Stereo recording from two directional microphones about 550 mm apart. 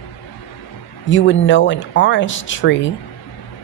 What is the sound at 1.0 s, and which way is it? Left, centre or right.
A woman's voice, centre.